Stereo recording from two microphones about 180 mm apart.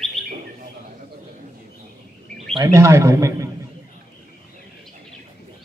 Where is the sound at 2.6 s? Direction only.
15° right (ahead or behind).